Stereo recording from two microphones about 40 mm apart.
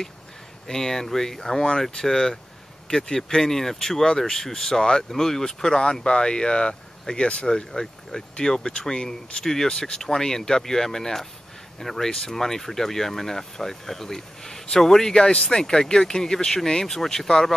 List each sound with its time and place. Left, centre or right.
0.7 s speech: centre